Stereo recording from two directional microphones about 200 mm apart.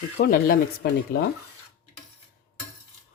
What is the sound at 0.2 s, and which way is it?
Speech, 50° left (ahead or behind).